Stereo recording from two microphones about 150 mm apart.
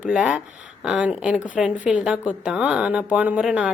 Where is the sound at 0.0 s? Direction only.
5° right (ahead or behind).